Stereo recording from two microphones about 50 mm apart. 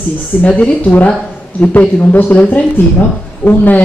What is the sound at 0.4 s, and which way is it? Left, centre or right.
A woman's voice, left.